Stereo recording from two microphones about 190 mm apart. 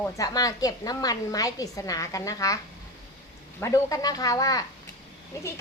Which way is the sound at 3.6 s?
20° left (ahead or behind).